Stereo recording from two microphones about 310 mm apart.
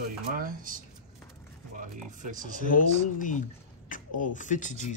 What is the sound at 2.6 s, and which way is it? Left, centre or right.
Speech, left.